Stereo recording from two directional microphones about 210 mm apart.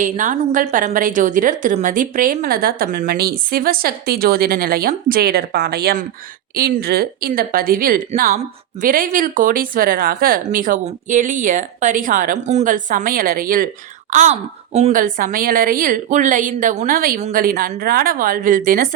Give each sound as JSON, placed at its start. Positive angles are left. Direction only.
{"t": 0.0, "sound": "a woman's voice", "side_deg": -40}